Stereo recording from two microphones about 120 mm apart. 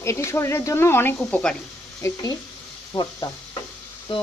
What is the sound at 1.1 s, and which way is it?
Speech, 5° left (ahead or behind).